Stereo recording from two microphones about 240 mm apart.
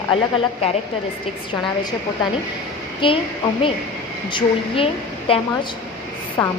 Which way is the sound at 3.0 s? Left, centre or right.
Left.